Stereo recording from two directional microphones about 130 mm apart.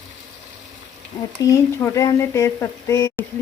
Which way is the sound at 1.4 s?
25° left (ahead or behind).